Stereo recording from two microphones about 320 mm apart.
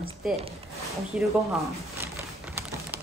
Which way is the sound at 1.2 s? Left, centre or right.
Centre.